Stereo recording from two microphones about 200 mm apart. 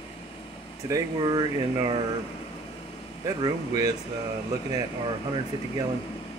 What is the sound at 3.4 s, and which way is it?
Speech, 20° right (ahead or behind).